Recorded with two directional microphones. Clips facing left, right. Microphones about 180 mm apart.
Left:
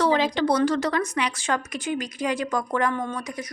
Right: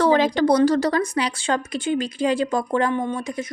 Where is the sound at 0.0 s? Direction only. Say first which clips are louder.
Right 4 dB; 45° right (ahead or behind).